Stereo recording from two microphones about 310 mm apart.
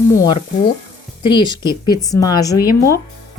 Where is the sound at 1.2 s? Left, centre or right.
Centre.